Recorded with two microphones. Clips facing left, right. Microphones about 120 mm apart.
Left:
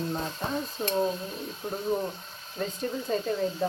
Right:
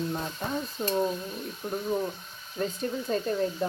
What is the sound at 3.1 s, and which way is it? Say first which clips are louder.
Speech: right 1 dB; 5° left (ahead or behind).